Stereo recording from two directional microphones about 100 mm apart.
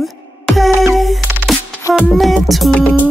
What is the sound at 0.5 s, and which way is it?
Music, centre (ahead or behind).